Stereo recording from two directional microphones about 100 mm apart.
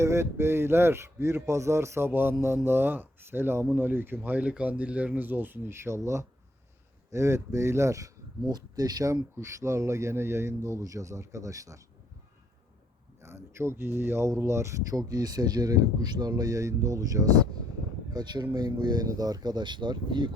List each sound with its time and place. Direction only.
0.0 s speech: 30° right (ahead or behind)
13.2 s speech: 25° right (ahead or behind)
18.1 s speech: 45° right (ahead or behind)